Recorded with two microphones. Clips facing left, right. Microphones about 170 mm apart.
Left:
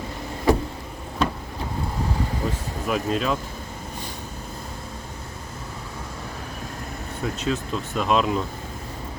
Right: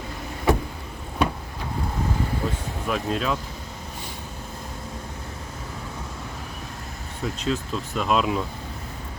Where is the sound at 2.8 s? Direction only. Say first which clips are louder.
Left 2 dB; centre (ahead or behind).